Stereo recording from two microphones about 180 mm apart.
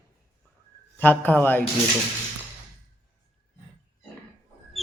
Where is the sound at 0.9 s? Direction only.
10° left (ahead or behind).